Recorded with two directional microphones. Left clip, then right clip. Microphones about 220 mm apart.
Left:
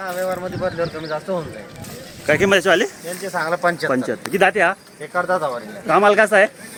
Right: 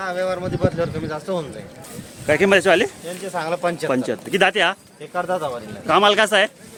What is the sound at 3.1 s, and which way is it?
Speech, 15° right (ahead or behind).